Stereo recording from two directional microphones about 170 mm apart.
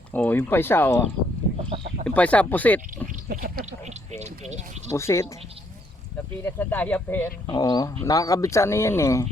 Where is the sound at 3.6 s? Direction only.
40° right (ahead or behind).